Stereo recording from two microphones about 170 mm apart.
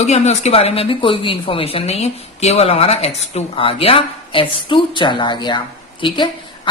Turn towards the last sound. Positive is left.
turn(degrees=30)  # may be behind; listen again after turning